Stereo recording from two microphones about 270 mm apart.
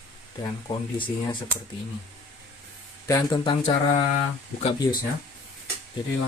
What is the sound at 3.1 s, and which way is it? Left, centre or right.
Speech, centre.